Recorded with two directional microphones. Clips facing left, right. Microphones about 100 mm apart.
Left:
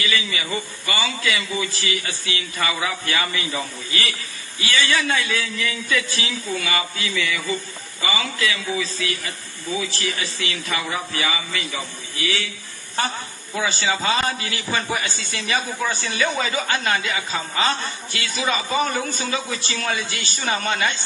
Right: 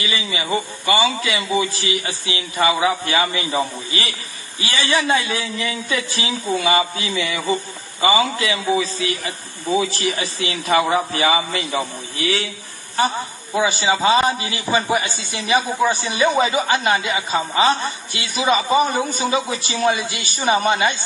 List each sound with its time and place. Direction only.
0.0 s a man's voice: 20° right (ahead or behind)
10.9 s a man's voice: 30° right (ahead or behind)
13.0 s a man's voice: 20° right (ahead or behind)